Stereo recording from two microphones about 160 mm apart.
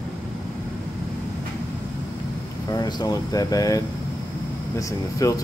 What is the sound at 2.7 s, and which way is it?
Speech, 25° left (ahead or behind).